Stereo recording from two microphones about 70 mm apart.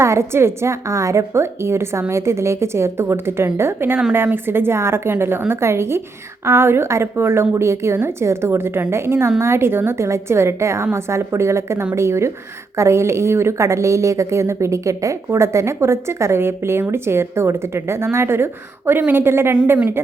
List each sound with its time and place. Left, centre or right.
0.0 s a woman's voice: right